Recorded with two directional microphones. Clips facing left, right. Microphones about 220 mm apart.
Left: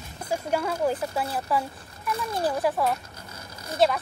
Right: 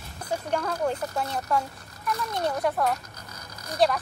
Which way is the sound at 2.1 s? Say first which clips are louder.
Left 2 dB; 30° left (ahead or behind).